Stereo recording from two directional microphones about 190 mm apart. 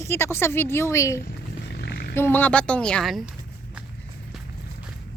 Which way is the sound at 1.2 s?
55° left (ahead or behind).